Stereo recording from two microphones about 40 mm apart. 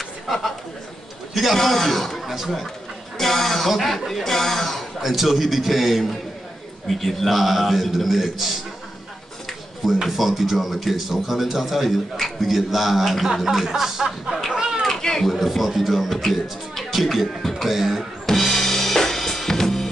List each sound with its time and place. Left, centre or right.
1.3 s a man's voice: centre
2.2 s speech: centre
3.2 s a man's voice: centre
10.0 s a man's voice: centre
14.5 s a sound: centre
14.9 s a sound: centre
15.3 s speech: centre
18.2 s drum kit: centre